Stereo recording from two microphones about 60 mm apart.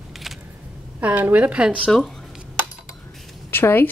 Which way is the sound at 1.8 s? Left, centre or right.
Centre.